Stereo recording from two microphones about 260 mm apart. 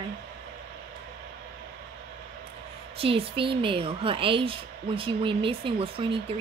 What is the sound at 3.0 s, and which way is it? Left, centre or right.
A woman's voice, right.